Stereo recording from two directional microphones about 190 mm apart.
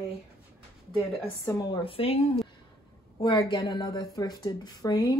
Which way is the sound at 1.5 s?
20° left (ahead or behind).